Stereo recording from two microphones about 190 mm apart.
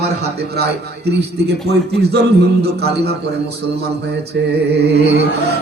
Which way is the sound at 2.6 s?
55° right (ahead or behind).